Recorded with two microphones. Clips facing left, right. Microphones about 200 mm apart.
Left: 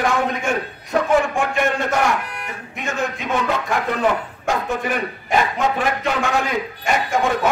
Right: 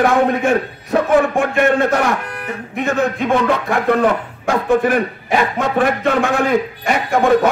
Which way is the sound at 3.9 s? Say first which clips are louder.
Right 7 dB; 55° right (ahead or behind).